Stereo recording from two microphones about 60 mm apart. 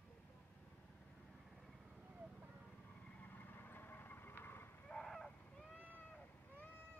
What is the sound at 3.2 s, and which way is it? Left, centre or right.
Vehicle, left.